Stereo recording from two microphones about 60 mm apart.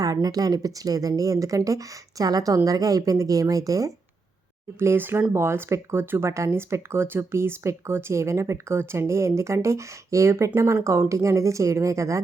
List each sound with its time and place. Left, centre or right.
0.0 s speech: right
4.8 s speech: right